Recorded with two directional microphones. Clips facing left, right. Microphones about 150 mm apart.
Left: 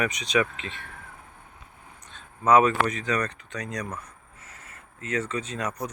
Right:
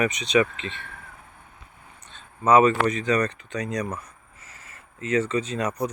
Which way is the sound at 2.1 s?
Centre (ahead or behind).